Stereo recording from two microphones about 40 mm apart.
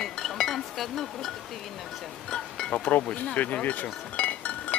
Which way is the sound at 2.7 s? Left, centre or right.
Left.